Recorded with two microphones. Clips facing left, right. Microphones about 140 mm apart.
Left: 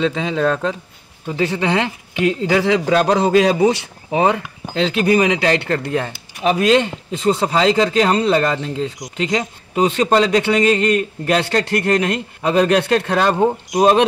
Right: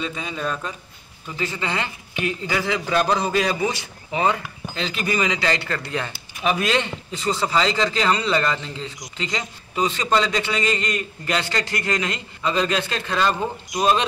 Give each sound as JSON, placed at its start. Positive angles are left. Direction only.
{"t": 0.0, "sound": "speech", "side_deg": 90}
{"t": 1.2, "sound": "a man's voice", "side_deg": 70}
{"t": 7.1, "sound": "a man's voice", "side_deg": 55}